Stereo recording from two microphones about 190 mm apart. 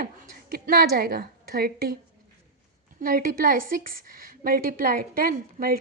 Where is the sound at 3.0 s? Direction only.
50° right (ahead or behind).